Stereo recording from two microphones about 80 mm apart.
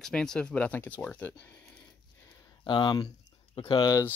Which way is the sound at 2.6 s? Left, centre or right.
Left.